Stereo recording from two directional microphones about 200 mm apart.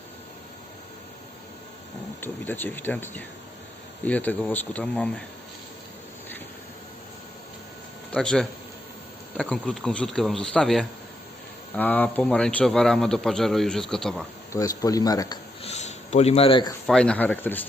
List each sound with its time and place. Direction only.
2.2 s speech: 10° left (ahead or behind)
8.1 s a man's voice: 5° left (ahead or behind)
14.5 s speech: 15° left (ahead or behind)
15.6 s a sound: 35° left (ahead or behind)
16.8 s speech: 5° left (ahead or behind)